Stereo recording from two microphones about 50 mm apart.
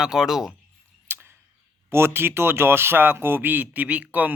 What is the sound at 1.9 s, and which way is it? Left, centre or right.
Speech, right.